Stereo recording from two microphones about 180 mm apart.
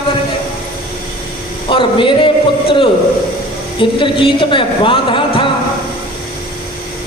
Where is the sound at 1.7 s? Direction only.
30° left (ahead or behind).